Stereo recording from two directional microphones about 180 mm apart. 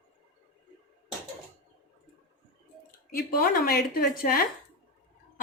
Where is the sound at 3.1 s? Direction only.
55° left (ahead or behind).